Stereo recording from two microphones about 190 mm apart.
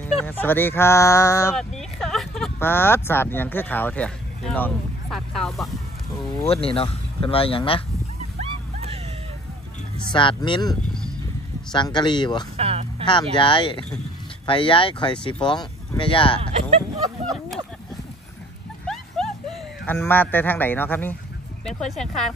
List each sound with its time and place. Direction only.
0.0 s speech: 10° left (ahead or behind)
1.5 s a sound: centre (ahead or behind)
2.6 s speech: 10° left (ahead or behind)
6.4 s speech: 30° left (ahead or behind)
10.1 s speech: 25° left (ahead or behind)
10.9 s horse: 5° left (ahead or behind)
11.7 s speech: 25° left (ahead or behind)
12.5 s a sound: 30° right (ahead or behind)
13.0 s speech: 25° left (ahead or behind)
19.2 s a sound: centre (ahead or behind)
19.9 s speech: 10° left (ahead or behind)